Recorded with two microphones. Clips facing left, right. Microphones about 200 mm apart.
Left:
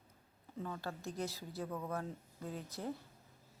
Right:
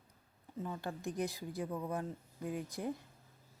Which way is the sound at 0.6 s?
15° right (ahead or behind).